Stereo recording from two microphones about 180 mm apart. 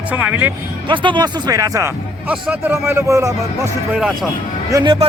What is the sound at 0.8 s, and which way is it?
Speech, 25° right (ahead or behind).